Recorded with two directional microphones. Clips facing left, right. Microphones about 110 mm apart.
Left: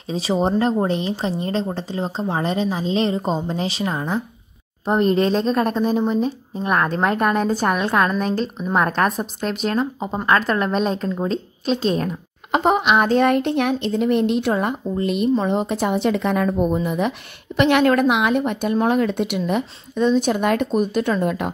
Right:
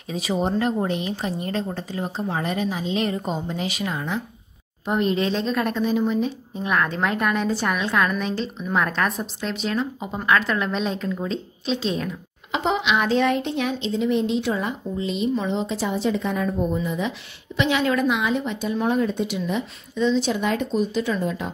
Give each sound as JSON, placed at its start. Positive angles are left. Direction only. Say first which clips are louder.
{"t": 0.1, "sound": "a woman's voice", "louder": "left 4 dB", "side_deg": 30}